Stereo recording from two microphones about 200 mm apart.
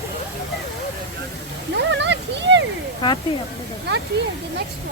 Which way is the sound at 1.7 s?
60° right (ahead or behind).